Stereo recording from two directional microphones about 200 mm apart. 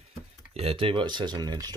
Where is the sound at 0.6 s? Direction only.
30° right (ahead or behind).